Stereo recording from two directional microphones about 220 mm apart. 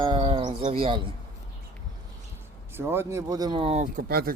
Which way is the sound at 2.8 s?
10° right (ahead or behind).